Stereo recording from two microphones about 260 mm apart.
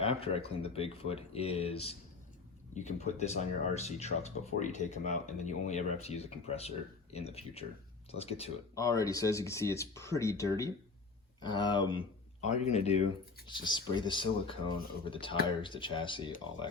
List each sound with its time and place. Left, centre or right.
0.0 s speech: left
8.7 s speech: centre